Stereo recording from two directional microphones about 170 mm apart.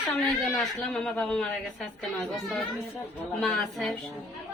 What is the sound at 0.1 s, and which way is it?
A woman's voice, centre (ahead or behind).